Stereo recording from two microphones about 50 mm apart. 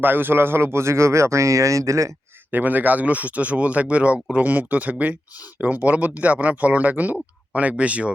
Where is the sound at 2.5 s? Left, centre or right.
Right.